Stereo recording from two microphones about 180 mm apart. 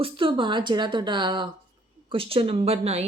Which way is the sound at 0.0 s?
30° right (ahead or behind).